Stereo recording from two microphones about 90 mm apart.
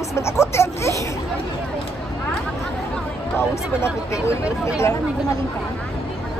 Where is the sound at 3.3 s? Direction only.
30° left (ahead or behind).